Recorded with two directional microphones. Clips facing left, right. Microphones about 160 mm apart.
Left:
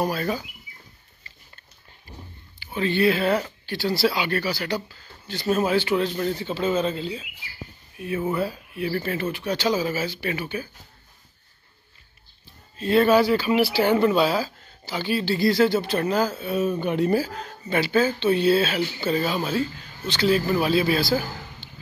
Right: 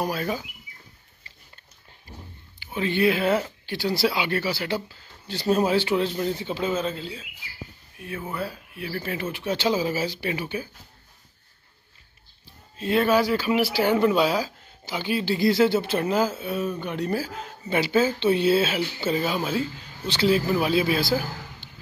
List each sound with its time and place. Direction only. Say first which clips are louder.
0.0 s speech: left 2 dB; 10° right (ahead or behind)
2.7 s speech: left 1 dB; 15° right (ahead or behind); by 5.5 s 30° right (ahead or behind)
5.5 s speech: even; 20° right (ahead or behind)
9.3 s speech: right 1 dB; 20° right (ahead or behind)
10.4 s speech: even; 15° right (ahead or behind)
12.7 s speech: left 3 dB; 15° right (ahead or behind)
16.3 s speech: left 4 dB; centre (ahead or behind)
17.4 s speech: even; 15° right (ahead or behind)
19.2 s speech: left 1 dB; 5° right (ahead or behind)